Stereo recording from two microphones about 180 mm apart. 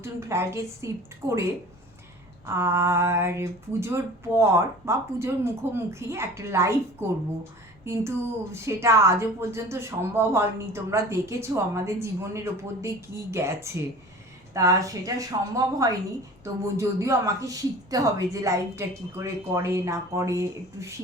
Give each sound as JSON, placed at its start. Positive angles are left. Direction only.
{"t": 0.0, "sound": "a woman's voice", "side_deg": -15}
{"t": 2.5, "sound": "a woman's voice", "side_deg": -15}